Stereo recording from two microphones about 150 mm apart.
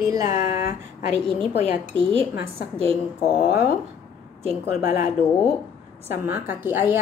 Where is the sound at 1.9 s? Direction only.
35° right (ahead or behind).